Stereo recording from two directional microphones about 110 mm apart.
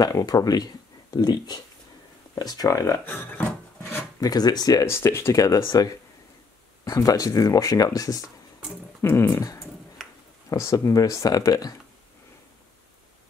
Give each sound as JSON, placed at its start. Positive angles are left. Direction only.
{"t": 0.0, "sound": "speech", "side_deg": 35}
{"t": 3.1, "sound": "filing", "side_deg": 15}
{"t": 4.2, "sound": "speech", "side_deg": 35}
{"t": 4.8, "sound": "speech", "side_deg": 25}
{"t": 10.0, "sound": "a sound", "side_deg": 0}
{"t": 10.5, "sound": "speech", "side_deg": 30}